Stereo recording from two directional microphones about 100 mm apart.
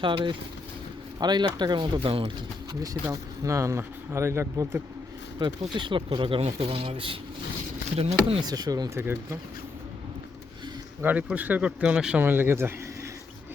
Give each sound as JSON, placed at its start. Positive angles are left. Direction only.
{"t": 0.0, "sound": "speech", "side_deg": -55}
{"t": 1.2, "sound": "speech", "side_deg": -45}
{"t": 2.8, "sound": "speech", "side_deg": -35}
{"t": 5.4, "sound": "speech", "side_deg": -50}
{"t": 7.9, "sound": "speech", "side_deg": -85}
{"t": 8.4, "sound": "speech", "side_deg": -40}
{"t": 9.0, "sound": "speech", "side_deg": -25}
{"t": 11.0, "sound": "speech", "side_deg": -15}